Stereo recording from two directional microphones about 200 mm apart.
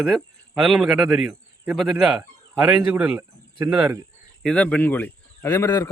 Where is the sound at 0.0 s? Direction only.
Centre (ahead or behind).